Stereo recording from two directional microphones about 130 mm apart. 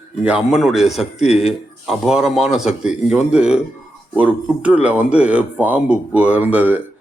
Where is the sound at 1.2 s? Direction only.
55° left (ahead or behind).